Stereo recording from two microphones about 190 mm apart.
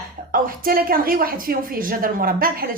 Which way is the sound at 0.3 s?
50° right (ahead or behind).